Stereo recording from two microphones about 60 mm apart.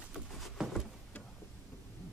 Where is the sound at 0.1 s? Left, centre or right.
Centre.